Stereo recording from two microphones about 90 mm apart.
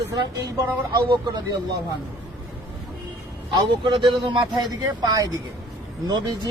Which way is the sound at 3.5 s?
60° right (ahead or behind).